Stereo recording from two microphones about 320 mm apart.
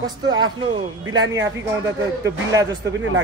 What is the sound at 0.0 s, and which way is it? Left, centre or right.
A man's voice, centre.